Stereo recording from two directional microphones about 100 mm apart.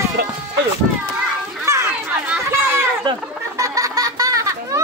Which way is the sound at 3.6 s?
35° right (ahead or behind).